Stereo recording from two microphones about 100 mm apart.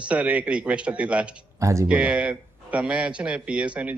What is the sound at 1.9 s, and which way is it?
A man's voice, 15° right (ahead or behind).